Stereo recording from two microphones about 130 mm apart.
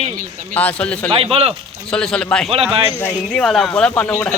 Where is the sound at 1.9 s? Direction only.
5° left (ahead or behind).